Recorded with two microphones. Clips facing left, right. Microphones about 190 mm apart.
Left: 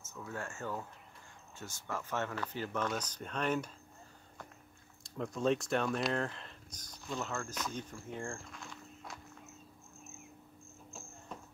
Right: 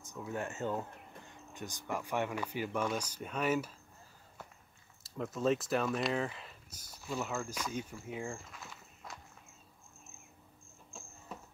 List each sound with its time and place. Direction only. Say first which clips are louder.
0.0 s speech: right 4 dB; 15° right (ahead or behind)
5.0 s speech: even; 5° right (ahead or behind)
11.3 s a sound: even; 5° right (ahead or behind)